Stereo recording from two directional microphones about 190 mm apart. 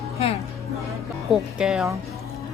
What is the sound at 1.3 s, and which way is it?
Speech, centre (ahead or behind).